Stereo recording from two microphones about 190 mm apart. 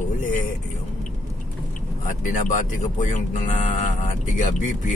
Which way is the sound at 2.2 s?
40° left (ahead or behind).